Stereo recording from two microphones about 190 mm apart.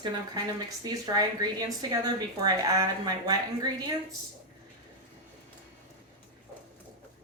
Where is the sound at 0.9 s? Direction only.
20° right (ahead or behind).